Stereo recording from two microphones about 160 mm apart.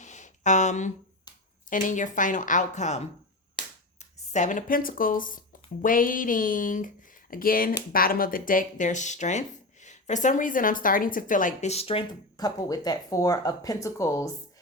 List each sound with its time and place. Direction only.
0.0 s a sound: 50° left (ahead or behind)
1.7 s speech: 55° left (ahead or behind)
4.3 s speech: 50° left (ahead or behind)
12.4 s speech: 25° left (ahead or behind)